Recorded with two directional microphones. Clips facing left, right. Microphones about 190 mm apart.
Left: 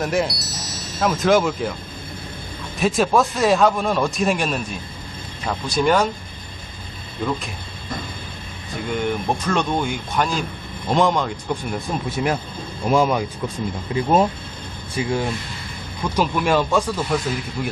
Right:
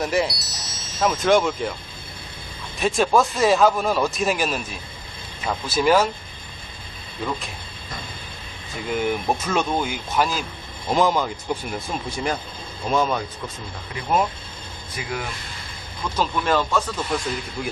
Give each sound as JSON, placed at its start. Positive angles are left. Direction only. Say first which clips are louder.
{"t": 0.0, "sound": "speech", "louder": "left 1 dB", "side_deg": 0}
{"t": 2.7, "sound": "speech", "louder": "left 1 dB", "side_deg": 0}
{"t": 8.9, "sound": "speech", "louder": "even", "side_deg": -5}
{"t": 13.9, "sound": "speech", "louder": "left 5 dB", "side_deg": 30}
{"t": 16.0, "sound": "speech", "louder": "left 3 dB", "side_deg": 10}
{"t": 17.6, "sound": "speech", "louder": "left 2 dB", "side_deg": 0}